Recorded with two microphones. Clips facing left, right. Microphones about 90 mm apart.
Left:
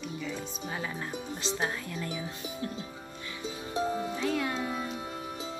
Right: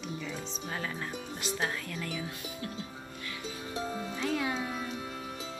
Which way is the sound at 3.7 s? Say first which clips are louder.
Left 6 dB; 20° left (ahead or behind).